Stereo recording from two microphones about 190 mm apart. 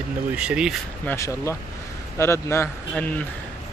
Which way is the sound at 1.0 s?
15° left (ahead or behind).